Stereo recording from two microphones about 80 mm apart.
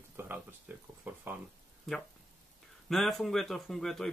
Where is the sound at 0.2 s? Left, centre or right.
Right.